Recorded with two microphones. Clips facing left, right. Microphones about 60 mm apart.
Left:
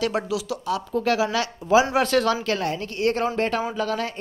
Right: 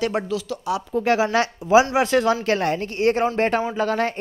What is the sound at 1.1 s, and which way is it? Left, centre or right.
Speech, right.